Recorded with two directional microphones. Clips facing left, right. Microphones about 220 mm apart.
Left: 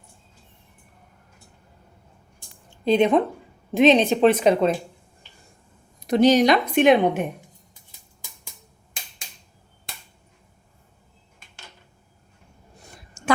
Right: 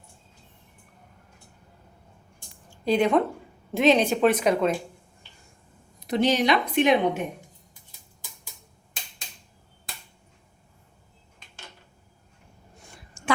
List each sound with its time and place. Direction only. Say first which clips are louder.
2.6 s speech: left 4 dB; 20° left (ahead or behind)
6.1 s speech: left 6 dB; 40° left (ahead or behind)
13.2 s a sound: left 4 dB; 40° left (ahead or behind)